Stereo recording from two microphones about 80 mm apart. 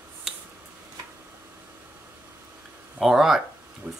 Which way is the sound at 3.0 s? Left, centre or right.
Centre.